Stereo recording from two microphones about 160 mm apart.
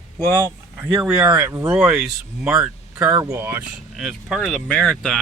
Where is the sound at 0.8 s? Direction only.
10° right (ahead or behind).